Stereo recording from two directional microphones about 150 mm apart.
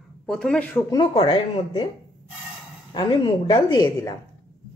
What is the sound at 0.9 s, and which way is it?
Speech, 35° left (ahead or behind).